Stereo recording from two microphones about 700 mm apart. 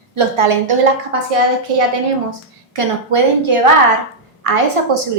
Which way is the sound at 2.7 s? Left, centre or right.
Right.